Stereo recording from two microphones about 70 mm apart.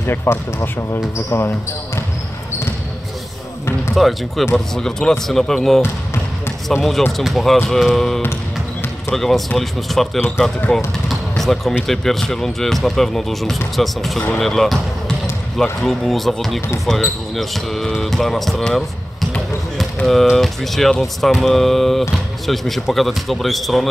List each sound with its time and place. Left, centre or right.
0.0 s speech: left
3.9 s speech: centre
11.1 s basketball bounce: centre
11.9 s speech: centre
20.1 s speech: centre